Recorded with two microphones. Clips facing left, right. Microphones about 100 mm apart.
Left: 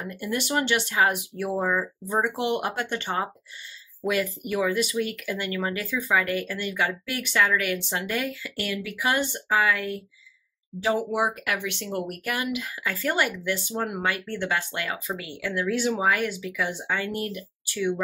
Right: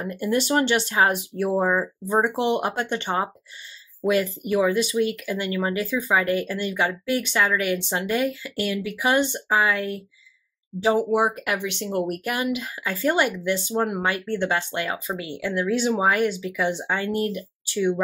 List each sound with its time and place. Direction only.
0.0 s speech: 35° right (ahead or behind)